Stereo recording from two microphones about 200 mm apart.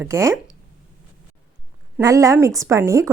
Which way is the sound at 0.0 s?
15° right (ahead or behind).